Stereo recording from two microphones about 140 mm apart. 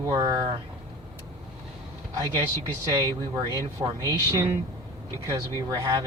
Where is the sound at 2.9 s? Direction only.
25° right (ahead or behind).